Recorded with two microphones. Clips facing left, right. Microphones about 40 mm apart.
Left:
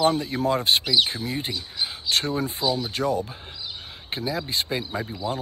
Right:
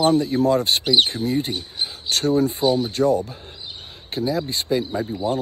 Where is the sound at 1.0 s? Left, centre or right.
Left.